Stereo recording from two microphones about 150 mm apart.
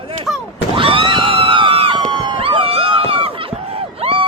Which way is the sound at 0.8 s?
35° right (ahead or behind).